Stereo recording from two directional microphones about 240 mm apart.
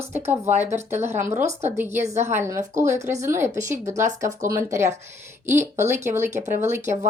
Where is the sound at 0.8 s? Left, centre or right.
Centre.